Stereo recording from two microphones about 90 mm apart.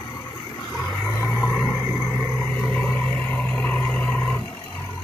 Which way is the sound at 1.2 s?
20° left (ahead or behind).